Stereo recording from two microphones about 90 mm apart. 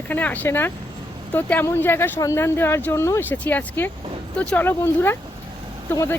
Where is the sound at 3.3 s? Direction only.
20° left (ahead or behind).